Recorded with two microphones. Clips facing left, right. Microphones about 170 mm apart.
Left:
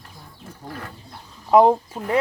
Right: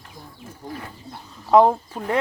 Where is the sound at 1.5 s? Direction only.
15° left (ahead or behind).